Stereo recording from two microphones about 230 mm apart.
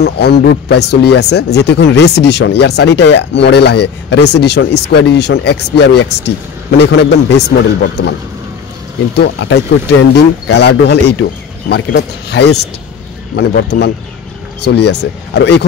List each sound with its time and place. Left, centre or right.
0.0 s speech: left
9.1 s speech: left